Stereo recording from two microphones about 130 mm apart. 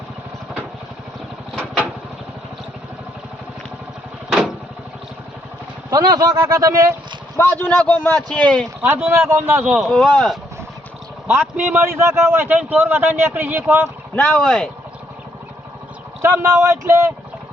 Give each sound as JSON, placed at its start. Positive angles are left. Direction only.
{"t": 1.5, "sound": "vehicle", "side_deg": -10}
{"t": 4.3, "sound": "vehicle", "side_deg": -5}
{"t": 5.9, "sound": "speech", "side_deg": -30}
{"t": 7.6, "sound": "a man's voice", "side_deg": 15}
{"t": 8.8, "sound": "a man's voice", "side_deg": -15}
{"t": 9.8, "sound": "speech", "side_deg": 0}
{"t": 11.5, "sound": "a man's voice", "side_deg": -15}
{"t": 14.2, "sound": "a man's voice", "side_deg": 10}
{"t": 16.2, "sound": "speech", "side_deg": -20}